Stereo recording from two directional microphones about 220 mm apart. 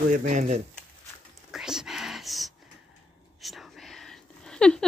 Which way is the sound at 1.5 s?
Centre (ahead or behind).